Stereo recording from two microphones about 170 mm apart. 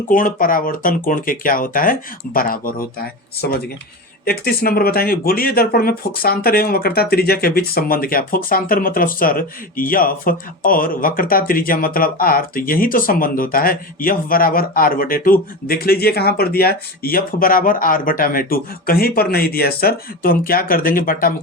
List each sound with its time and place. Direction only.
0.1 s speech: 55° left (ahead or behind)